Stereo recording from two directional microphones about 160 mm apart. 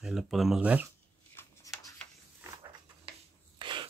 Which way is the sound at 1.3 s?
20° left (ahead or behind).